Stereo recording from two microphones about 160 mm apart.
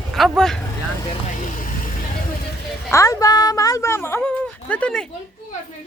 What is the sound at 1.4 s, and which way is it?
Vehicle, 55° left (ahead or behind).